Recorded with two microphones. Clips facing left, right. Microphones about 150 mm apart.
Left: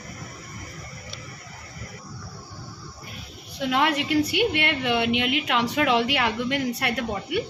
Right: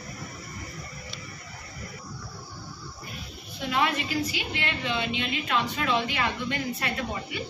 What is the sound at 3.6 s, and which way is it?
A woman's voice, 70° left (ahead or behind).